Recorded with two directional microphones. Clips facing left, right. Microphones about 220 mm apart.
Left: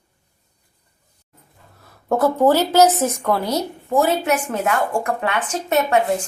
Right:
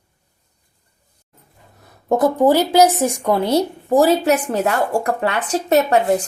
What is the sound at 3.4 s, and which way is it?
Speech, 30° right (ahead or behind).